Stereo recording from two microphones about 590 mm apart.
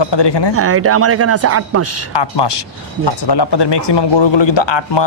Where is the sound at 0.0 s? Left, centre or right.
Left.